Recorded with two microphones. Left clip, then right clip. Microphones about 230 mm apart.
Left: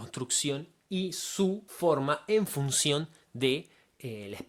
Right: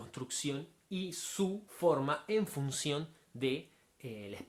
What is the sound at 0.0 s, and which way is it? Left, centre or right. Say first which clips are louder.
Speech: left 8 dB; left.